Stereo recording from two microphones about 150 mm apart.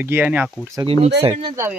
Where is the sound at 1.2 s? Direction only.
35° right (ahead or behind).